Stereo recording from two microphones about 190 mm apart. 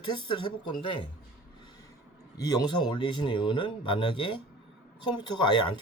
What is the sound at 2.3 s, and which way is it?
A man's voice, 20° left (ahead or behind).